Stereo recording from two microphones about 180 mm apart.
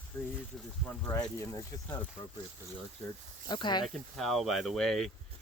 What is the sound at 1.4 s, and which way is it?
Speech, 20° left (ahead or behind).